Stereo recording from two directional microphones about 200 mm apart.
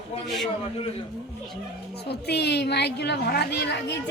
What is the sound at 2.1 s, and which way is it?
A woman's voice, 55° left (ahead or behind).